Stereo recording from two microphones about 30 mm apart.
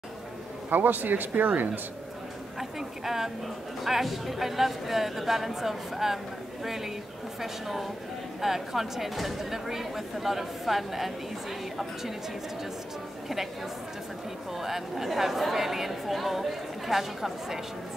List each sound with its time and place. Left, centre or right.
0.7 s speech: right
3.8 s a woman's voice: centre
14.6 s speech: centre